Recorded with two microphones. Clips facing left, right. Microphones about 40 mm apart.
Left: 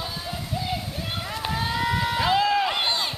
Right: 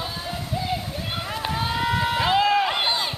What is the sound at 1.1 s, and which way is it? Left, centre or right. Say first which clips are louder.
Run: right 2 dB; centre.